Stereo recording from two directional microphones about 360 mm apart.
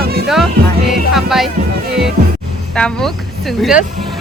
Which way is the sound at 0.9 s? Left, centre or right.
Centre.